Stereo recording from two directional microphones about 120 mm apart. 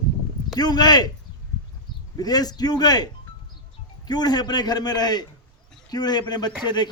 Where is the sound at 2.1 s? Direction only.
35° left (ahead or behind).